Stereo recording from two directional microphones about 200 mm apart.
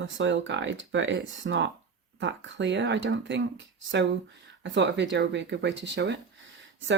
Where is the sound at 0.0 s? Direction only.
65° right (ahead or behind).